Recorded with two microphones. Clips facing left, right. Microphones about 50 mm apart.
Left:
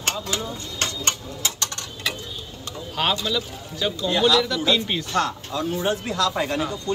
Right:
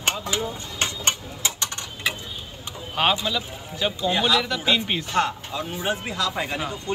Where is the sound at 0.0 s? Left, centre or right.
Right.